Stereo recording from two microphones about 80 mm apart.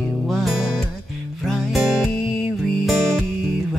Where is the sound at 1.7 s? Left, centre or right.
Centre.